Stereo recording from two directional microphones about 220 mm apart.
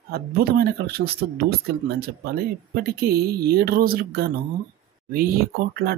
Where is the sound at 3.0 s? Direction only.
45° right (ahead or behind).